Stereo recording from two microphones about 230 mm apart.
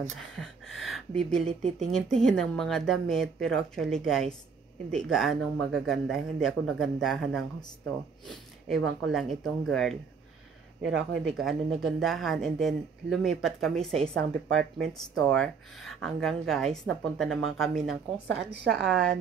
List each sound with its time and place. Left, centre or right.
0.4 s speech: centre
18.3 s a woman's voice: right
18.7 s speech: centre